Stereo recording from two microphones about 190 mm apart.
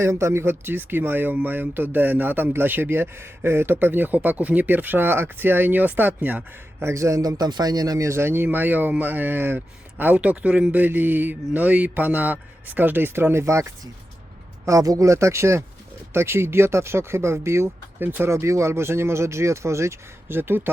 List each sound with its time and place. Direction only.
0.0 s speech: 15° right (ahead or behind)